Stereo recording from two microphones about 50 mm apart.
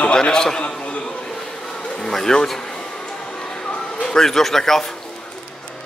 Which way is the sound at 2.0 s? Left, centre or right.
Centre.